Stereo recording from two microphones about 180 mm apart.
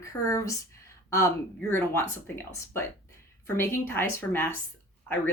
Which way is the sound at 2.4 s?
15° left (ahead or behind).